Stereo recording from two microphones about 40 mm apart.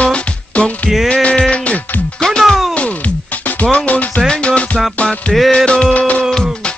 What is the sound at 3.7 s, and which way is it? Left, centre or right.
Music, left.